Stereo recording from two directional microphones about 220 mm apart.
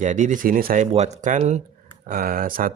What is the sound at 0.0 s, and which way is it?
Speech, 35° right (ahead or behind).